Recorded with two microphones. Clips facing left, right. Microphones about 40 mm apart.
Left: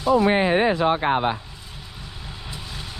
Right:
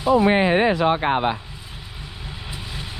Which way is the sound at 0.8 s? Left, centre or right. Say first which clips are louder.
Right 1 dB; right.